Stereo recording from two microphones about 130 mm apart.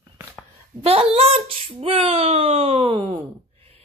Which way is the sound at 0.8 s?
50° right (ahead or behind).